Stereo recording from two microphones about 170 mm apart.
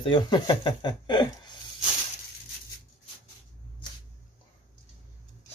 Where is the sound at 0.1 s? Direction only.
25° left (ahead or behind).